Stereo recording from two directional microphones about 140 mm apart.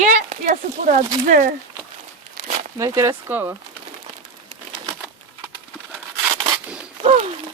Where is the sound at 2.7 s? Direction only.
20° right (ahead or behind).